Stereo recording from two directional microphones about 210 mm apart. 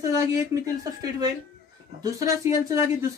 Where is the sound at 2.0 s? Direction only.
15° right (ahead or behind).